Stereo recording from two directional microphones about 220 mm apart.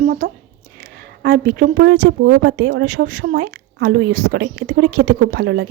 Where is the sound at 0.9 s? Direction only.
45° right (ahead or behind).